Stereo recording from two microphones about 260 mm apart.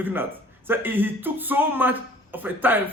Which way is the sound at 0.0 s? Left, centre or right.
Centre.